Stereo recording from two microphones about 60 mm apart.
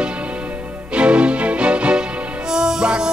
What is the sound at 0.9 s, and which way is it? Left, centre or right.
Music, centre.